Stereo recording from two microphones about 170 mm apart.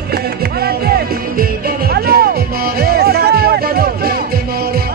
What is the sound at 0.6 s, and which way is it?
Music, 65° right (ahead or behind).